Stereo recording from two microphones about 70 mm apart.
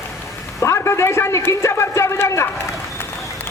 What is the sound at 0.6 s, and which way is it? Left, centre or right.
A man's voice, left.